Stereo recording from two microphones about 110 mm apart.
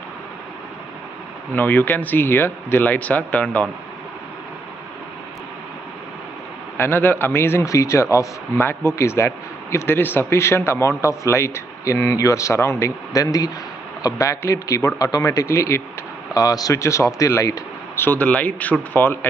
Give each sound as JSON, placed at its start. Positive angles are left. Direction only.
{"t": 1.5, "sound": "speech", "side_deg": 15}
{"t": 6.8, "sound": "speech", "side_deg": 20}
{"t": 18.0, "sound": "speech", "side_deg": 15}